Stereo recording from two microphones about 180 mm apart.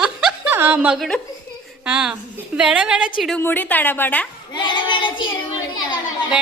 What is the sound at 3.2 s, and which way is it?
A woman's voice, 10° left (ahead or behind).